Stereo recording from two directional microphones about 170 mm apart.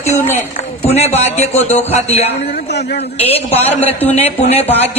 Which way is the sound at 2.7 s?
70° left (ahead or behind).